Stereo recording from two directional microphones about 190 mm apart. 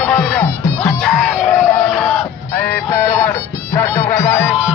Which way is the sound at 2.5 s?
15° left (ahead or behind).